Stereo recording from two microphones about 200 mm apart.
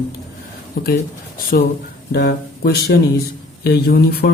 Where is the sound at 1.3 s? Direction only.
45° left (ahead or behind).